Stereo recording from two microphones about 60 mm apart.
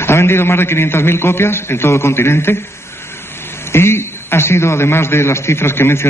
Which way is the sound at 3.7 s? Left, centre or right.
Left.